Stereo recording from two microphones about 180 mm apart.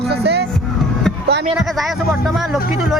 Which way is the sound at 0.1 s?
65° right (ahead or behind).